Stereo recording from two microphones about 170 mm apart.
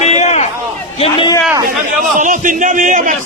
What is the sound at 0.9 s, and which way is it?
Speech, 35° left (ahead or behind).